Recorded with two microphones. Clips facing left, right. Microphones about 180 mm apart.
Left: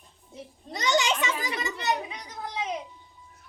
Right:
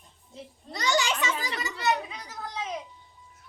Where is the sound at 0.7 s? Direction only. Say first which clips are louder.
Left 2 dB; 20° left (ahead or behind).